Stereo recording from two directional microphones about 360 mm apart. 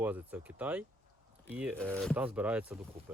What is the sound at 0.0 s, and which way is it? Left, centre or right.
Speech, centre.